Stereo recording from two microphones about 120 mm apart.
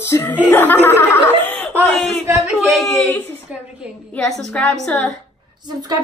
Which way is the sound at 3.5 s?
15° right (ahead or behind).